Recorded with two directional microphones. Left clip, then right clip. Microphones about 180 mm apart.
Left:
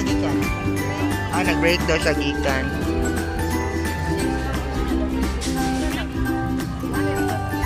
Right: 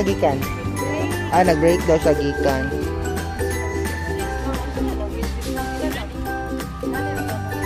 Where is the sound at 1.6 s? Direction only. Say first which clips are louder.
Right 3 dB; 20° right (ahead or behind).